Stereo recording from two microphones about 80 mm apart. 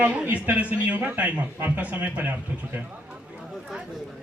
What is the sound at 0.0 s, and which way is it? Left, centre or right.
A man's voice, centre.